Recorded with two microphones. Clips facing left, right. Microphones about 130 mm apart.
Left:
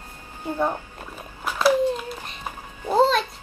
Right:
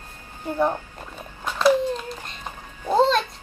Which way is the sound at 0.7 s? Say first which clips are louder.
Right 2 dB; 5° left (ahead or behind).